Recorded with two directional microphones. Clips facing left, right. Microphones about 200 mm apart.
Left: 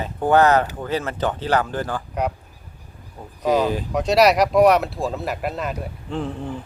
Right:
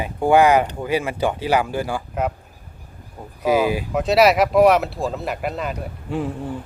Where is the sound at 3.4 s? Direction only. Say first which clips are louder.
Right 1 dB; 10° right (ahead or behind).